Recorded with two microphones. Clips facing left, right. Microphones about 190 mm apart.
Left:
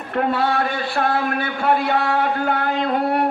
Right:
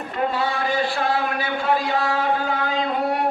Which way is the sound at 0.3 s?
60° left (ahead or behind).